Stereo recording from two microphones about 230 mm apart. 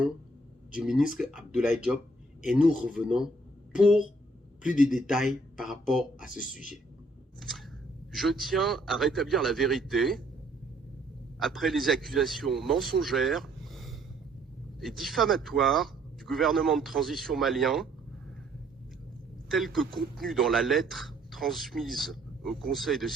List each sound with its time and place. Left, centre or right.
0.8 s speech: centre
4.6 s a man's voice: left
4.9 s speech: centre
8.1 s speech: centre
11.3 s speech: centre
19.5 s speech: centre